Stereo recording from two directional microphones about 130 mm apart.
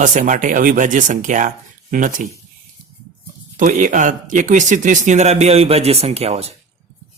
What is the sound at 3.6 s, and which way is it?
Speech, 90° right.